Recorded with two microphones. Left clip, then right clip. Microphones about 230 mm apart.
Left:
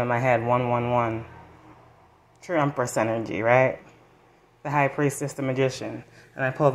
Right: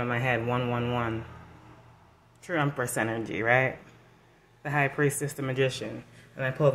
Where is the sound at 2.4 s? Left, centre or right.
Centre.